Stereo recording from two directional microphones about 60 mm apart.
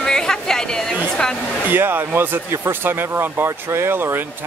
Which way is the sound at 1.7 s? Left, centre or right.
Right.